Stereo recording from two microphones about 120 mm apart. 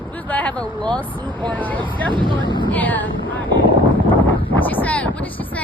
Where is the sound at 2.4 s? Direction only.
40° left (ahead or behind).